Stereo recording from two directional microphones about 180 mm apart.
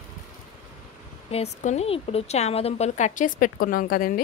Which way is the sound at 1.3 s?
35° left (ahead or behind).